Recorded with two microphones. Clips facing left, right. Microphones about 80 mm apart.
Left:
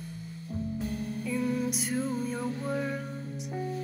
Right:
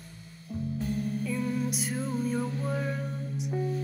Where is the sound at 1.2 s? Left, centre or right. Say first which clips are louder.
Left 1 dB; centre.